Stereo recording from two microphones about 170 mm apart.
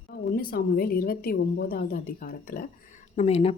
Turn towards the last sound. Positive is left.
turn(degrees=40)  # may be behind; listen again after turning